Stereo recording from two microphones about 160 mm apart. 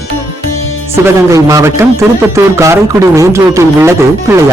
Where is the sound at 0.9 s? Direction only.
15° right (ahead or behind).